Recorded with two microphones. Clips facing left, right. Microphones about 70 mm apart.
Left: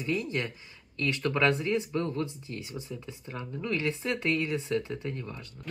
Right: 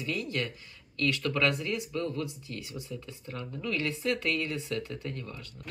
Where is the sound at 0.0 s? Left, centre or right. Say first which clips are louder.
Left 2 dB; left.